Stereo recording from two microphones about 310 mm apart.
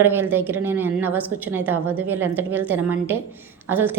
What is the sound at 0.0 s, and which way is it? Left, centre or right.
A woman's voice, centre.